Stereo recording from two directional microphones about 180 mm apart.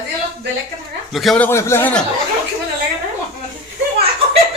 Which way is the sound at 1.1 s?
Centre (ahead or behind).